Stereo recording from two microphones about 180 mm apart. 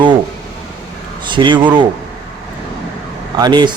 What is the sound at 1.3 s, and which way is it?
Speech, 25° right (ahead or behind).